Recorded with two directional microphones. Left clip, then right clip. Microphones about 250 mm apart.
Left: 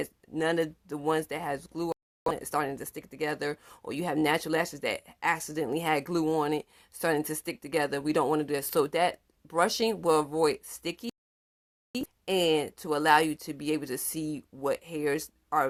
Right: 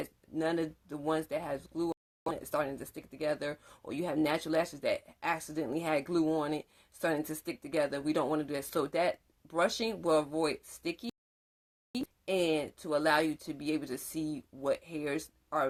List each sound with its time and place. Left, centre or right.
0.0 s speech: left